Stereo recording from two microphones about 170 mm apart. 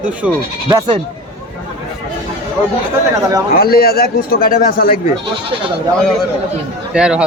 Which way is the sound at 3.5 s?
65° left (ahead or behind).